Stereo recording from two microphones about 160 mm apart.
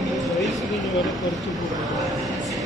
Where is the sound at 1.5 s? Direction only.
Centre (ahead or behind).